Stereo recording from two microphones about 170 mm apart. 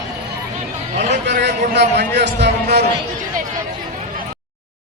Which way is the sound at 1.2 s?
90° right.